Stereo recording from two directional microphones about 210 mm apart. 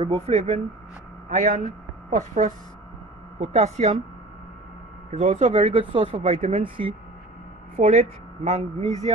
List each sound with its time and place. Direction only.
0.0 s a woman's voice: 30° right (ahead or behind)
5.1 s a woman's voice: 30° right (ahead or behind)